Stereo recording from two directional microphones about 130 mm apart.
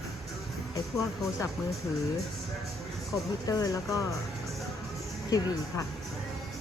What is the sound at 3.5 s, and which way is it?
Speech, 25° left (ahead or behind).